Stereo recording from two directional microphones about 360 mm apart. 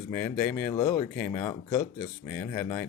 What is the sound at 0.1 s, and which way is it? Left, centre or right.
Speech, centre.